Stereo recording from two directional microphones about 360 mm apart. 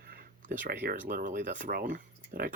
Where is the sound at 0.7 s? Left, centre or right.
Right.